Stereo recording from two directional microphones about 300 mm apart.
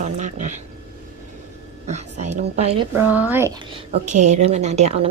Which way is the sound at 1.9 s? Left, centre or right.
Right.